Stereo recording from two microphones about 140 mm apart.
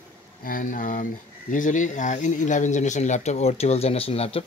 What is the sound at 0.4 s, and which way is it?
Speech, 85° left.